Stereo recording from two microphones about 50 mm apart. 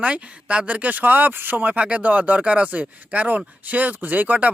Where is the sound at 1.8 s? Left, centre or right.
Right.